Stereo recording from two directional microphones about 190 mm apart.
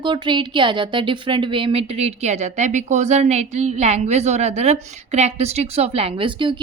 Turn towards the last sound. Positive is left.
turn(degrees=-25)  # may be behind; listen again after turning